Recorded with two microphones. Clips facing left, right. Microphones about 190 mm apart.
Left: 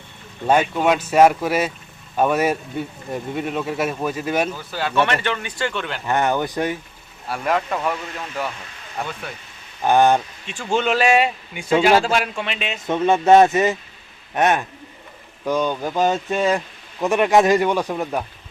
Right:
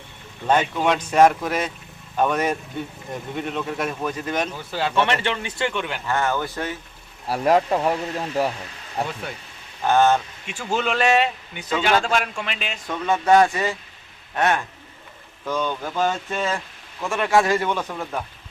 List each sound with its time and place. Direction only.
0.4 s speech: 10° left (ahead or behind)
4.7 s speech: 25° right (ahead or behind)
6.1 s speech: 20° left (ahead or behind)
7.3 s speech: 35° right (ahead or behind)
9.8 s speech: 15° left (ahead or behind)
10.4 s speech: 10° right (ahead or behind)
12.8 s speech: 25° left (ahead or behind)